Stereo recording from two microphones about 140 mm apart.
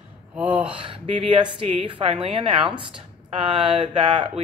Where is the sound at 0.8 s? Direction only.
40° right (ahead or behind).